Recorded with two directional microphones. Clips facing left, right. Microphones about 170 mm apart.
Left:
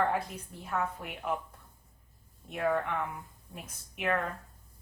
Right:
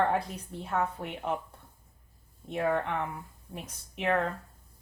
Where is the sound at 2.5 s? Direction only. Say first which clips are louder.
Right 1 dB; 30° right (ahead or behind).